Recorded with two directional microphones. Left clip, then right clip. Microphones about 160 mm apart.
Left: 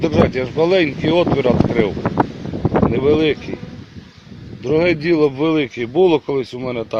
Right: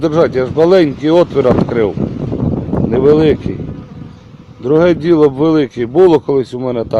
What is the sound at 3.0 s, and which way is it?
Speech, 35° right (ahead or behind).